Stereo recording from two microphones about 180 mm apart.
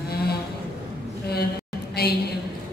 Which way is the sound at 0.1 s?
60° left (ahead or behind).